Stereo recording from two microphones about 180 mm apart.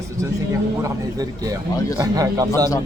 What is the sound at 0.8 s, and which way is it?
Speech, 20° right (ahead or behind).